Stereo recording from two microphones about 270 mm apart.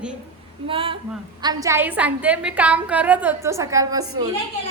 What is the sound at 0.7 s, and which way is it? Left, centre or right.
A woman's voice, centre.